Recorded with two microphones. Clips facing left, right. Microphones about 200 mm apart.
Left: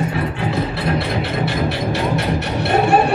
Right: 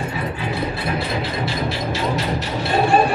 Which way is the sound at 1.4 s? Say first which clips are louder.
Left 3 dB; 65° left (ahead or behind).